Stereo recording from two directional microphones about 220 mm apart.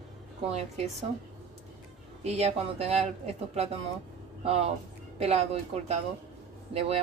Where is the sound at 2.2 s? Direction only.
30° right (ahead or behind).